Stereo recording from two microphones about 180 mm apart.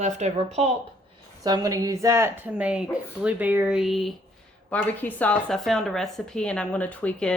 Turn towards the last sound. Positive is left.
turn(degrees=5)  # may be behind; listen again after turning